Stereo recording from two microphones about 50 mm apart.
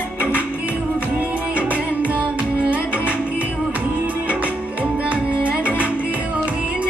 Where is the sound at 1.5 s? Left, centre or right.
Right.